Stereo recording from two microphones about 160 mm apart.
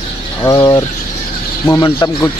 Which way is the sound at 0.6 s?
30° left (ahead or behind).